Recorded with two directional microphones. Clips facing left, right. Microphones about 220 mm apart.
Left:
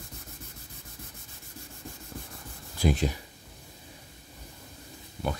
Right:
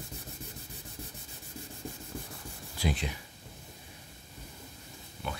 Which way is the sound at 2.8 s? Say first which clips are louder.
Left 7 dB; 45° left (ahead or behind).